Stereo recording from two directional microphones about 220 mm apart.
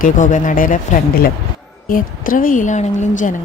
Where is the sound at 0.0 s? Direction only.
35° left (ahead or behind).